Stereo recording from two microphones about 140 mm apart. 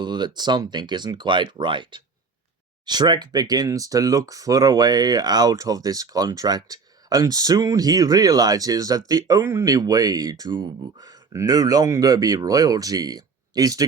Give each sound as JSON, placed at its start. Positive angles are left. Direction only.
{"t": 0.0, "sound": "speech", "side_deg": -30}